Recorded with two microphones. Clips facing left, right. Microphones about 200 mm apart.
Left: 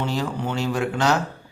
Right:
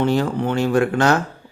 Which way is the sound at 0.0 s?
55° right (ahead or behind).